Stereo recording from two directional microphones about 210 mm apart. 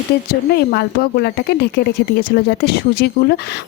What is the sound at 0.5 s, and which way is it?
A woman's voice, 50° left (ahead or behind).